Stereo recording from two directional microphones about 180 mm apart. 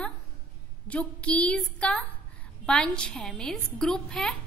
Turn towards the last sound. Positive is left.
turn(degrees=5)  # may be behind; listen again after turning